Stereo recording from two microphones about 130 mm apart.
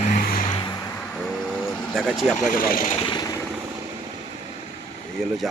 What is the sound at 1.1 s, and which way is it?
Vehicle, 5° left (ahead or behind).